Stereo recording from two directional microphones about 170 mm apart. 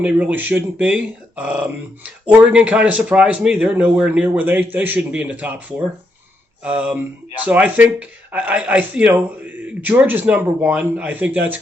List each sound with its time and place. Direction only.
0.0 s speech: 10° right (ahead or behind)